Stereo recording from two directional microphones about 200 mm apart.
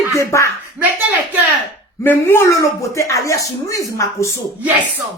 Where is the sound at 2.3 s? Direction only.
10° left (ahead or behind).